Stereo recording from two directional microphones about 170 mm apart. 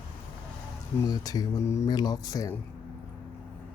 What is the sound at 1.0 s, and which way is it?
Speech, 20° left (ahead or behind).